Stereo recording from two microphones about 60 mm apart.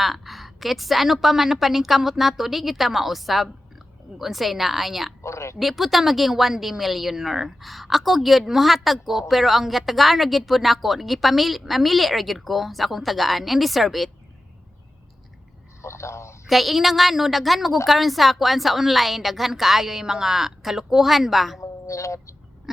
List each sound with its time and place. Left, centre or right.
0.0 s a woman's voice: centre
5.2 s speech: left
5.5 s a woman's voice: centre
15.8 s a sound: left
16.5 s a woman's voice: centre
21.6 s a sound: left